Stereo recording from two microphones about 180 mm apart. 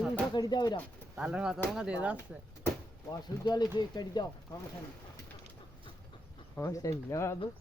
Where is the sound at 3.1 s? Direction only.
20° left (ahead or behind).